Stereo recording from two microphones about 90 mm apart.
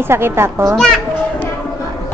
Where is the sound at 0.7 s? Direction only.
5° left (ahead or behind).